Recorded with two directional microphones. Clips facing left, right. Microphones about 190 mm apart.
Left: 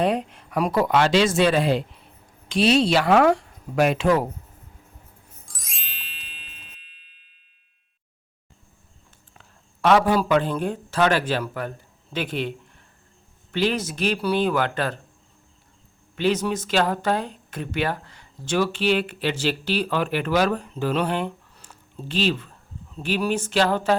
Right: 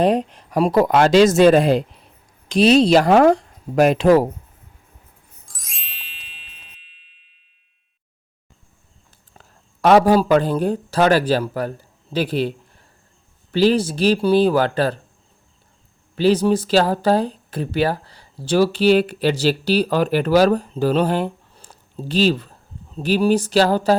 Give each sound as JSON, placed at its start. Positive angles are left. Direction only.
{"t": 0.0, "sound": "speech", "side_deg": -35}
{"t": 5.5, "sound": "music", "side_deg": 0}
{"t": 9.3, "sound": "a man's voice", "side_deg": -40}
{"t": 16.1, "sound": "speech", "side_deg": -35}